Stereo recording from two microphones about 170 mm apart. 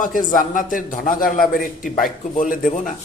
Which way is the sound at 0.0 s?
50° left (ahead or behind).